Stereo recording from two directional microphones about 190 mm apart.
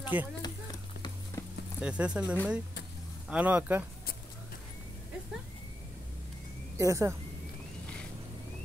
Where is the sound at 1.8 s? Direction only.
5° right (ahead or behind).